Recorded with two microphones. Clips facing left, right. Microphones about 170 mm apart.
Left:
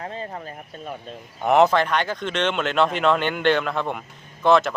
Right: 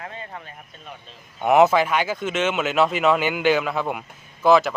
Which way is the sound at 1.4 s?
5° right (ahead or behind).